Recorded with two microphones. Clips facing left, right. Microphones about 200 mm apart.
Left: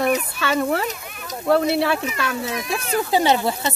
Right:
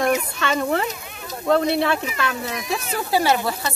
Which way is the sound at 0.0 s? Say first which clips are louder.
Even; 5° left (ahead or behind).